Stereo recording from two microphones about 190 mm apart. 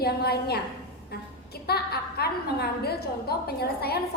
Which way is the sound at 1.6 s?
55° left (ahead or behind).